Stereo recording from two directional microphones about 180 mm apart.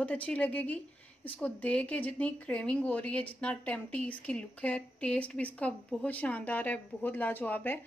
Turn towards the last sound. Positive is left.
turn(degrees=10)  # may be behind; listen again after turning